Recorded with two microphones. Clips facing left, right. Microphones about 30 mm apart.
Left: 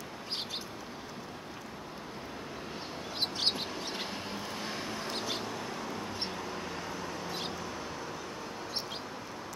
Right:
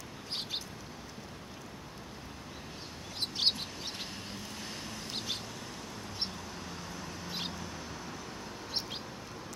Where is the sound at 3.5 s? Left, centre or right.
Centre.